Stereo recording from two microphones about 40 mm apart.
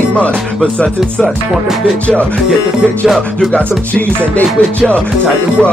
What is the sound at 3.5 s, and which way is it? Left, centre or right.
Music, left.